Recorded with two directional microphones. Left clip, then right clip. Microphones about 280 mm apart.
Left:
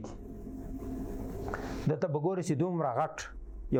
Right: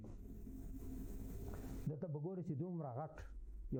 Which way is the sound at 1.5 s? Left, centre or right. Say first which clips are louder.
Left 18 dB; centre.